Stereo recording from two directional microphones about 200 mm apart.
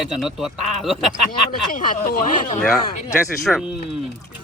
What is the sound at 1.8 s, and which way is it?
Speech, 45° left (ahead or behind).